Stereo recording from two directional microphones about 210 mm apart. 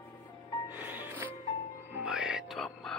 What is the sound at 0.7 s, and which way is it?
Music, 10° right (ahead or behind).